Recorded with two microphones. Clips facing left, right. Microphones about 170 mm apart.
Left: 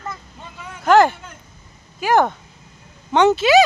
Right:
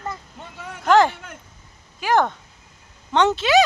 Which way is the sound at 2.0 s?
10° left (ahead or behind).